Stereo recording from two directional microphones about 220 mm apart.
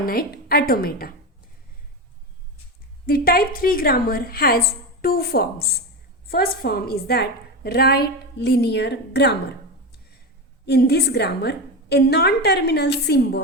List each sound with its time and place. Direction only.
0.0 s a woman's voice: 40° left (ahead or behind)
3.1 s a woman's voice: 40° left (ahead or behind)
10.7 s a woman's voice: 45° left (ahead or behind)